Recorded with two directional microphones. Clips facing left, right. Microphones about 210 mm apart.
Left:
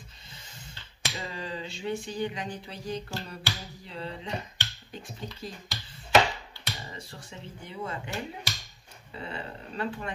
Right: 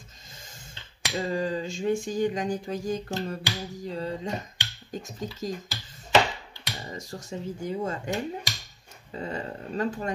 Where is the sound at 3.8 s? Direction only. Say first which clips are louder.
Right 5 dB; 40° right (ahead or behind).